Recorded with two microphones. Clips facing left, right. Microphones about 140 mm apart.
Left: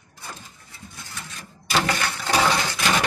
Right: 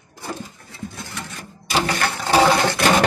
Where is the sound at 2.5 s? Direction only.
60° right (ahead or behind).